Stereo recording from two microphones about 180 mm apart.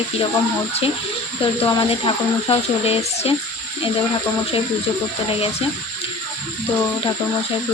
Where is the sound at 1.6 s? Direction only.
30° left (ahead or behind).